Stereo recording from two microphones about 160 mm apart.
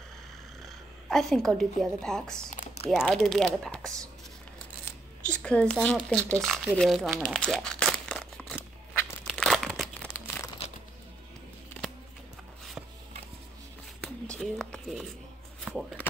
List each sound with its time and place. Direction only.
1.0 s a woman's voice: centre (ahead or behind)
5.3 s speech: 5° left (ahead or behind)
9.3 s crumpling: centre (ahead or behind)
10.2 s crumpling: 15° left (ahead or behind)
14.0 s a sound: 5° left (ahead or behind)
15.7 s a sound: 10° right (ahead or behind)